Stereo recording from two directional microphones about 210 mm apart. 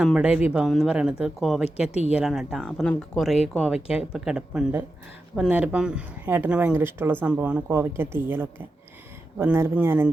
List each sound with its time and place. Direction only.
0.0 s speech: 5° right (ahead or behind)
1.9 s speech: 30° left (ahead or behind)
2.1 s speech: centre (ahead or behind)